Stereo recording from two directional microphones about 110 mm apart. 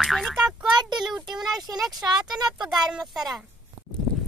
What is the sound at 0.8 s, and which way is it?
Child singing, 40° right (ahead or behind).